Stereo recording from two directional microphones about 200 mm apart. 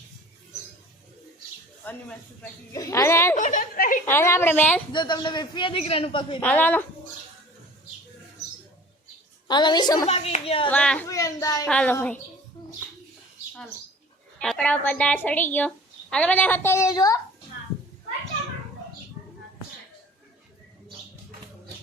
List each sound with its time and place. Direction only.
1.8 s a woman's voice: 10° left (ahead or behind)
3.3 s a sound: 40° left (ahead or behind)
4.0 s a woman's voice: 10° left (ahead or behind)
4.9 s a man's voice: 20° left (ahead or behind)
6.4 s a woman's voice: 10° left (ahead or behind)
9.5 s a man's voice: 20° left (ahead or behind)
10.7 s a woman's voice: 5° left (ahead or behind)
14.4 s a woman's voice: 5° left (ahead or behind)